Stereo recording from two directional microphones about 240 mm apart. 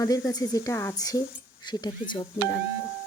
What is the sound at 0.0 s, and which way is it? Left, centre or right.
A woman's voice, centre.